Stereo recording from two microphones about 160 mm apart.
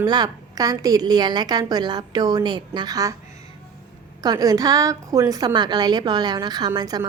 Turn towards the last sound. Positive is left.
turn(degrees=-25)  # may be behind; listen again after turning